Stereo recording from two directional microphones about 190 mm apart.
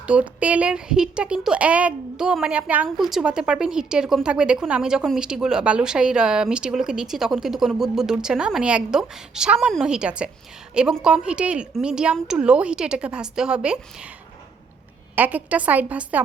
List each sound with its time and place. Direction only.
0.1 s a woman's voice: 5° right (ahead or behind)
15.1 s a woman's voice: 10° right (ahead or behind)